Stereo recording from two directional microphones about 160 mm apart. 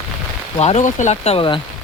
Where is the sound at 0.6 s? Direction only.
45° left (ahead or behind).